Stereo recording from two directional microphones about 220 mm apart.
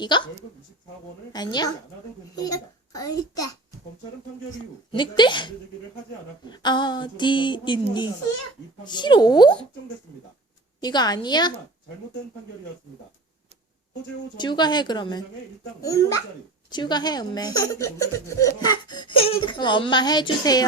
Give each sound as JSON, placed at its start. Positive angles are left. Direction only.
{"t": 0.0, "sound": "speech", "side_deg": 20}
{"t": 1.3, "sound": "a child's voice", "side_deg": 20}
{"t": 4.9, "sound": "speech", "side_deg": 20}
{"t": 10.8, "sound": "speech", "side_deg": 20}
{"t": 14.3, "sound": "a child's voice", "side_deg": 20}